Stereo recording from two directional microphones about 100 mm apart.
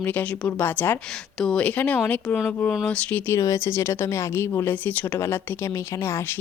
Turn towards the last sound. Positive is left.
turn(degrees=20)  # may be behind; listen again after turning